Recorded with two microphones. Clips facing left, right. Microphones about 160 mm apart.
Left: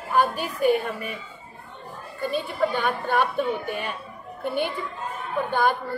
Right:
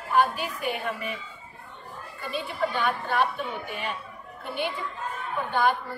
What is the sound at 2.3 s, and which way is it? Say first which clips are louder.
Speech: left 3 dB; 45° left (ahead or behind).